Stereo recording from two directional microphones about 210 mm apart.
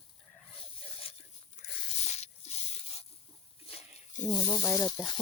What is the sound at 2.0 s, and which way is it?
Drip, 30° left (ahead or behind).